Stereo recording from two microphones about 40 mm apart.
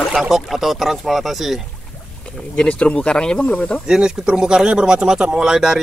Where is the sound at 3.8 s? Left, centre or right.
Centre.